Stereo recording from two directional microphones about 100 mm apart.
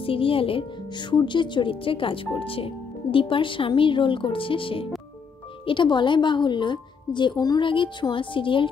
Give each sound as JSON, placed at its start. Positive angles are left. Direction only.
{"t": 0.0, "sound": "a woman's voice", "side_deg": 65}